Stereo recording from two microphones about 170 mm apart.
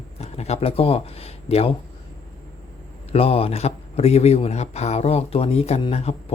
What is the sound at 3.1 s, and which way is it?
Speech, 35° left (ahead or behind).